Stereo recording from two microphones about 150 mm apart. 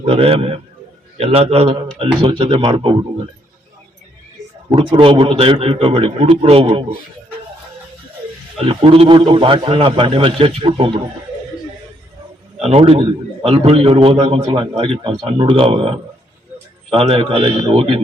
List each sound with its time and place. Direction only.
0.0 s a man's voice: 40° right (ahead or behind)
4.7 s a man's voice: 35° right (ahead or behind)
8.5 s a man's voice: 40° right (ahead or behind)
12.6 s a man's voice: 40° right (ahead or behind)